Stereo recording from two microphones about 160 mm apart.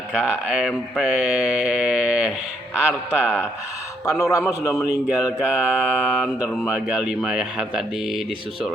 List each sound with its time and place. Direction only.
0.1 s mantra: centre (ahead or behind)
4.2 s a man's voice: 20° left (ahead or behind)
5.0 s mantra: 5° right (ahead or behind)